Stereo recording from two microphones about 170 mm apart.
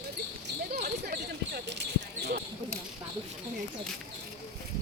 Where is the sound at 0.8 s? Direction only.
65° right (ahead or behind); by 2.4 s 80° right.